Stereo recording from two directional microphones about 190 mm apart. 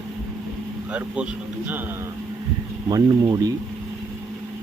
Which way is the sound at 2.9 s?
20° right (ahead or behind).